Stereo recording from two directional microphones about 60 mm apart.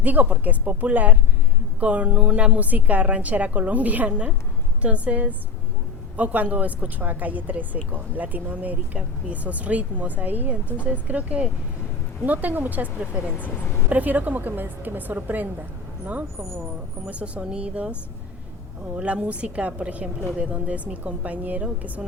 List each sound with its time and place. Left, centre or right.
0.0 s a woman's voice: right
17.1 s speech: right
18.9 s speech: right